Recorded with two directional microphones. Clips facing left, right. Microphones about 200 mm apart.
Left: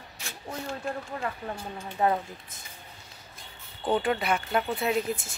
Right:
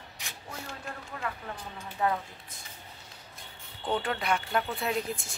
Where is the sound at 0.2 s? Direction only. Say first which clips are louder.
Left 4 dB; 15° right (ahead or behind).